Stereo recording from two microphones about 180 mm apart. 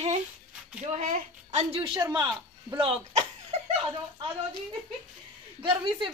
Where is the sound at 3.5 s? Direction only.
35° right (ahead or behind).